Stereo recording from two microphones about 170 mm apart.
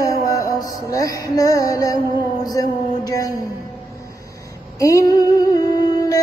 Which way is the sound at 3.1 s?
20° left (ahead or behind).